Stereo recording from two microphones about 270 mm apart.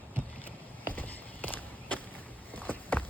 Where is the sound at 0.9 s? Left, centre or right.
Centre.